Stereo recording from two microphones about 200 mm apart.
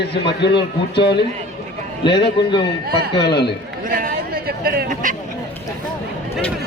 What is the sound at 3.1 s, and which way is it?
Speech, 55° left (ahead or behind).